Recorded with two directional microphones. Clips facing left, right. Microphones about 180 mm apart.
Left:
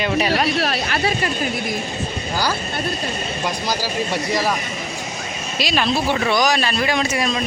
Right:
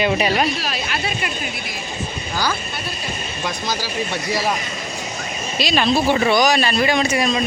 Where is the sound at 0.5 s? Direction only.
65° left (ahead or behind).